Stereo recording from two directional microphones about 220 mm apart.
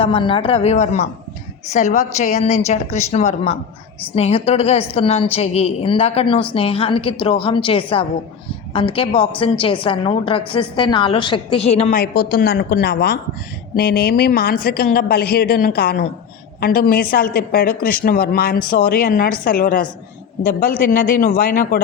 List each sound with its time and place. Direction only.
0.0 s a woman's voice: 25° left (ahead or behind)
11.9 s a woman's voice: 45° left (ahead or behind)